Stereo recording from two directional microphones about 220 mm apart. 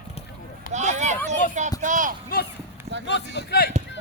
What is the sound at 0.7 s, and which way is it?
Speech, 30° right (ahead or behind).